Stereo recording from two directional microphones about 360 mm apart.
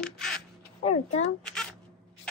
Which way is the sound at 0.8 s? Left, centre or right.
Centre.